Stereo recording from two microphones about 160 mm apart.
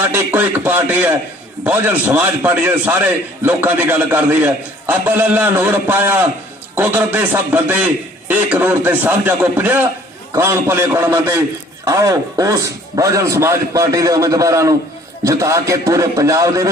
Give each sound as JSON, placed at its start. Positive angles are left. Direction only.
{"t": 0.1, "sound": "a man's voice", "side_deg": -10}